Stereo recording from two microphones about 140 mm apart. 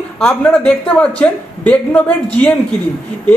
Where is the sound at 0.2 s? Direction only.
5° left (ahead or behind).